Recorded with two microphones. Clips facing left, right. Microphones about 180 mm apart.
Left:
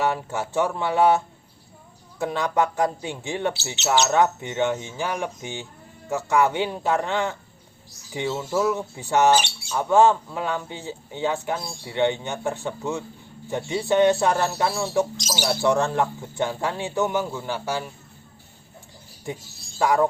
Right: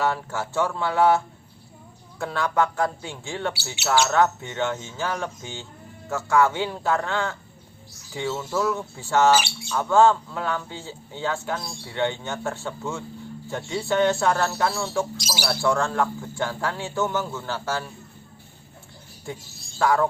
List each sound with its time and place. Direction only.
0.0 s speech: 20° left (ahead or behind)
15.2 s speech: 10° right (ahead or behind)
15.4 s speech: 20° left (ahead or behind)
19.3 s speech: 20° left (ahead or behind)